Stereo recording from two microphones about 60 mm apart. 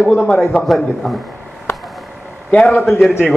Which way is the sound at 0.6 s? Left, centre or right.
Centre.